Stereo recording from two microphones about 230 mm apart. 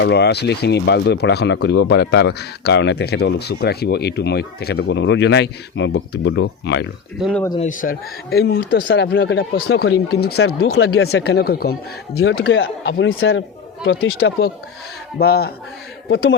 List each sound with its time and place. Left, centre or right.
0.0 s speech: left
7.2 s speech: centre
7.6 s speech: left
10.7 s speech: left
11.1 s speech: left
12.3 s speech: left
15.2 s speech: left
16.0 s speech: left